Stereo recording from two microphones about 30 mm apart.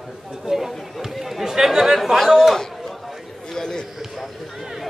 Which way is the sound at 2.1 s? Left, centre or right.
Centre.